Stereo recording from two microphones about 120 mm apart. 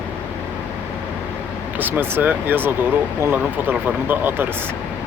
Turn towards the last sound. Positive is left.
turn(degrees=-15)  # may be behind; listen again after turning